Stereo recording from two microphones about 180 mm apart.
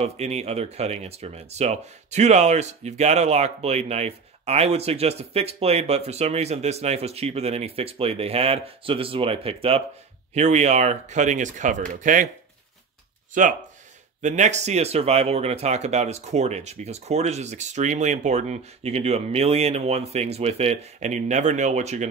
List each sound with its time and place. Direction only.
0.0 s speech: 35° right (ahead or behind)
13.3 s speech: 45° right (ahead or behind)